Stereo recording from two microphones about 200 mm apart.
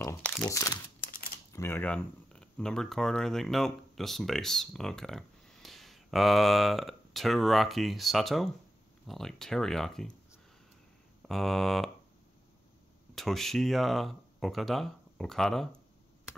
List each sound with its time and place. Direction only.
0.5 s speech: 15° left (ahead or behind)
11.2 s speech: centre (ahead or behind)
13.1 s speech: centre (ahead or behind)